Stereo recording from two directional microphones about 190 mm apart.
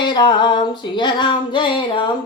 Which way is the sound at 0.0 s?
25° left (ahead or behind).